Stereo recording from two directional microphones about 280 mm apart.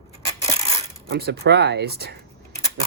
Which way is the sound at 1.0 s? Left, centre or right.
Right.